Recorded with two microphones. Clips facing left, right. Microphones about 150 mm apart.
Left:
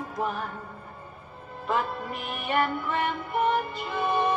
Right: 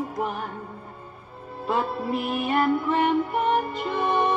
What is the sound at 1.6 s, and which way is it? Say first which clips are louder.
Music: right 3 dB; 30° right (ahead or behind).